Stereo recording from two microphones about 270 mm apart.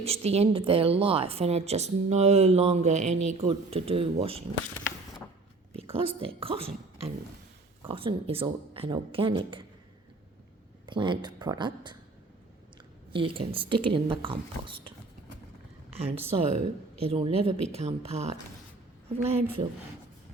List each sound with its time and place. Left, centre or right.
0.0 s a woman's voice: right
5.7 s a sound: right
6.1 s a woman's voice: centre
7.8 s a woman's voice: centre
10.8 s speech: centre
13.1 s a woman's voice: centre